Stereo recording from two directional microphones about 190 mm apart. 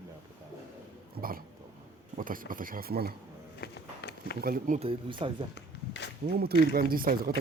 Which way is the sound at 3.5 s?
60° left (ahead or behind).